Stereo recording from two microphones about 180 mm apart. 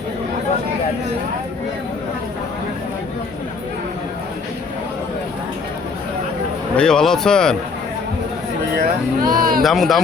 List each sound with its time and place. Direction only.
6.7 s speech: 5° left (ahead or behind)
8.7 s speech: 55° right (ahead or behind)
9.6 s speech: centre (ahead or behind)